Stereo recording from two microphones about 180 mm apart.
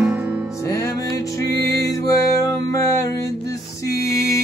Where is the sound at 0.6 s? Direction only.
15° left (ahead or behind).